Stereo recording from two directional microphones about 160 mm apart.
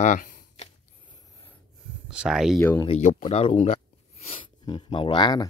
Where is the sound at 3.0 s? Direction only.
50° left (ahead or behind).